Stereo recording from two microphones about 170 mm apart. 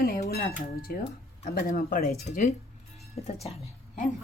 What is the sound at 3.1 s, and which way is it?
Speech, 35° left (ahead or behind).